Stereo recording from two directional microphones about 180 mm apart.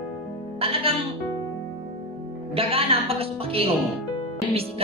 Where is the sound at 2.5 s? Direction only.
30° right (ahead or behind).